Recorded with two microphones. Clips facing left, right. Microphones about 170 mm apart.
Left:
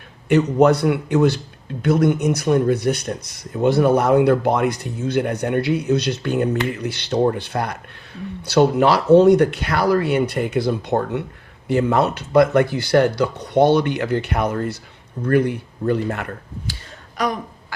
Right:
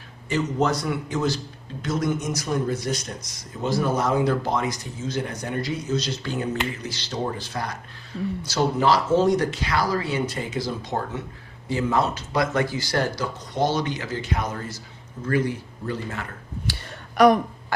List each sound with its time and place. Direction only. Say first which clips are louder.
0.3 s speech: left 9 dB; 60° left (ahead or behind)
17.2 s throat clearing: right 7 dB; 70° right (ahead or behind)